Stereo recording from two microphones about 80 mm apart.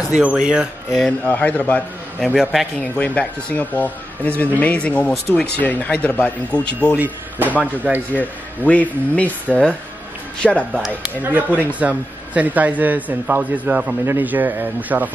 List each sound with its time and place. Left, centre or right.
0.2 s speech: centre
1.2 s speech: centre
2.1 s a man's voice: centre
3.0 s speech: centre
7.0 s a man's voice: right
8.1 s speech: centre
10.4 s a man's voice: centre
11.2 s a man's voice: right